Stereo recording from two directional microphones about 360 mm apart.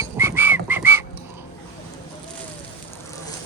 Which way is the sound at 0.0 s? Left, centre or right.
Centre.